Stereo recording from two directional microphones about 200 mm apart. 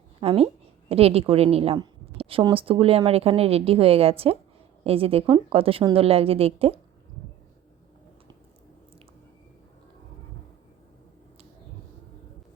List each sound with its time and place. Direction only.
0.2 s a woman's voice: 30° right (ahead or behind)